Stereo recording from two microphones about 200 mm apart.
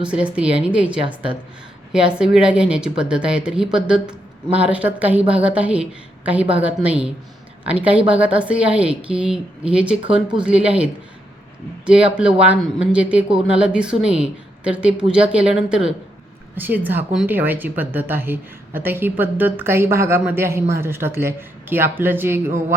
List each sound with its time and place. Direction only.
0.0 s a woman's voice: 5° right (ahead or behind)
11.9 s a woman's voice: 5° right (ahead or behind)